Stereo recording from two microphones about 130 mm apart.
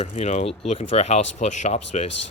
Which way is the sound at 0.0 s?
55° left (ahead or behind).